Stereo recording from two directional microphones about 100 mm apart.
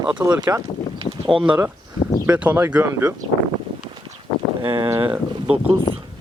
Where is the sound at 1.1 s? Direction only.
25° left (ahead or behind).